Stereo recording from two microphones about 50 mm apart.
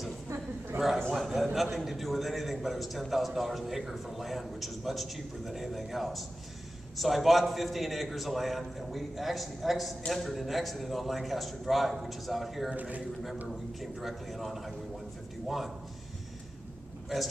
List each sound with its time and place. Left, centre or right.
0.7 s a sound: right
1.1 s a man's voice: centre
12.7 s a man's voice: right
13.5 s a man's voice: centre